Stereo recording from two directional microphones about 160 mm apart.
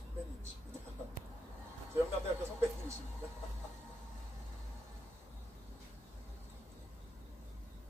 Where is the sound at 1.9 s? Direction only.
15° right (ahead or behind).